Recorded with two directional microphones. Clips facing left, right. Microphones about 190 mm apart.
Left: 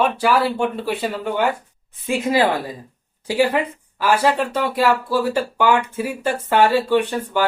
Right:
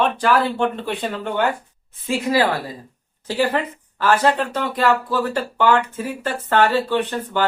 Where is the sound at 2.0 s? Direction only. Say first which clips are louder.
Left 1 dB; 20° left (ahead or behind).